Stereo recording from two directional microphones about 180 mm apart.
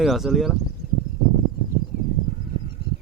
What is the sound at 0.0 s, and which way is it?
Speech, centre (ahead or behind).